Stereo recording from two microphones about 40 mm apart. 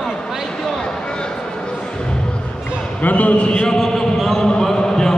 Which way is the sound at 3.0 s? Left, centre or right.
Left.